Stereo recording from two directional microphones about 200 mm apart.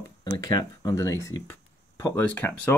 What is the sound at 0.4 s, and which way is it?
Speech, 20° left (ahead or behind).